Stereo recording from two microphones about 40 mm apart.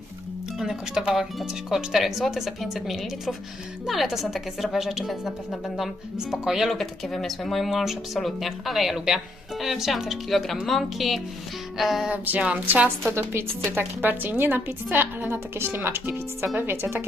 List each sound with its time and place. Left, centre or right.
0.6 s speech: centre
1.4 s speech: centre
6.1 s speech: centre
6.7 s speech: centre
10.2 s speech: centre
12.1 s a woman's voice: right
13.1 s a woman's voice: right
14.0 s a woman's voice: right
14.8 s a woman's voice: right
15.3 s speech: right
16.6 s speech: right